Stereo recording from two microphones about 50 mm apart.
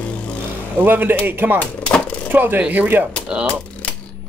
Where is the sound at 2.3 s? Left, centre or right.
Right.